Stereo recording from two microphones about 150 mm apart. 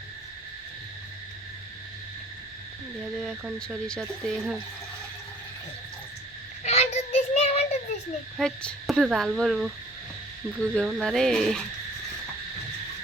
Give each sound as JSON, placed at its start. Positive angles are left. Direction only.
{"t": 3.2, "sound": "speech", "side_deg": -5}
{"t": 3.8, "sound": "speech", "side_deg": 5}
{"t": 6.6, "sound": "child singing", "side_deg": 50}
{"t": 8.4, "sound": "speech", "side_deg": 5}